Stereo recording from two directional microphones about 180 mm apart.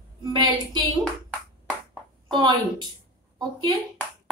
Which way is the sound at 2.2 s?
25° right (ahead or behind).